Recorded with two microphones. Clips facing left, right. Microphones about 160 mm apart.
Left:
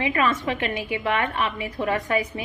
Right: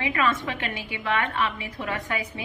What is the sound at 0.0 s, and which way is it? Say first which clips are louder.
Speech: left 2 dB; 25° left (ahead or behind).